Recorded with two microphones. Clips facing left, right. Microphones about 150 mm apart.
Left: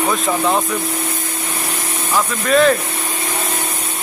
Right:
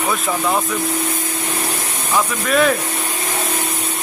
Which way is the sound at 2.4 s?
5° right (ahead or behind).